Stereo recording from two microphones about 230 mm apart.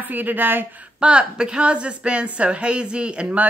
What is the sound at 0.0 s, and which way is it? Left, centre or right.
Speech, centre.